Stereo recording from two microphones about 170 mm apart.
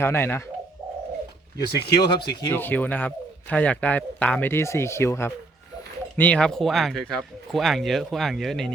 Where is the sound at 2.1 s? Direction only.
25° left (ahead or behind).